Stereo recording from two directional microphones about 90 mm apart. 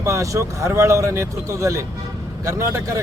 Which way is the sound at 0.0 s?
35° right (ahead or behind).